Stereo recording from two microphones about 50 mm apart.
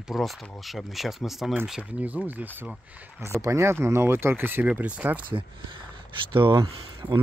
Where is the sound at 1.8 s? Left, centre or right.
Right.